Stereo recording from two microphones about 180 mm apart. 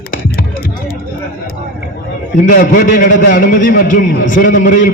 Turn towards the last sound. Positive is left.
turn(degrees=45)  # may be behind; listen again after turning